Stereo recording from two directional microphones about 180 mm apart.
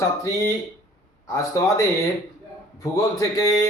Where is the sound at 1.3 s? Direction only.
15° left (ahead or behind).